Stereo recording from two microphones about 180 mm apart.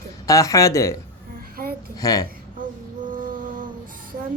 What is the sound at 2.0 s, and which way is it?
Speech, 20° left (ahead or behind).